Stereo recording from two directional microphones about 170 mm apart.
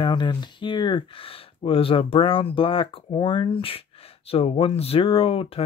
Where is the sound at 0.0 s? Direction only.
25° left (ahead or behind).